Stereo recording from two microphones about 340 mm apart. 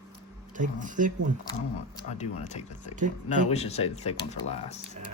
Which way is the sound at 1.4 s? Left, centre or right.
Centre.